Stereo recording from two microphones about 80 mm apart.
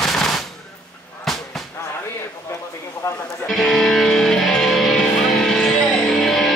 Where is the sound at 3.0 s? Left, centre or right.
Left.